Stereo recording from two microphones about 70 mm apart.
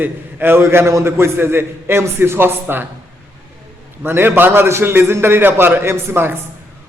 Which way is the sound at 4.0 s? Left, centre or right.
Right.